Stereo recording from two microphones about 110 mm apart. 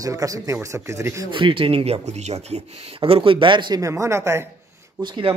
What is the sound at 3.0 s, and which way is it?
Speech, 60° right (ahead or behind).